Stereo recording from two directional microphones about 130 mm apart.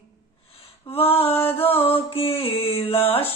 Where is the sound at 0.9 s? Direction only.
50° left (ahead or behind).